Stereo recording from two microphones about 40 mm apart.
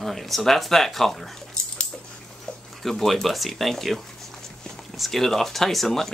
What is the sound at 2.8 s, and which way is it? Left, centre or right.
Speech, centre.